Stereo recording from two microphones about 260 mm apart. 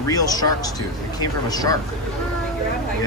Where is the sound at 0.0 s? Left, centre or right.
Centre.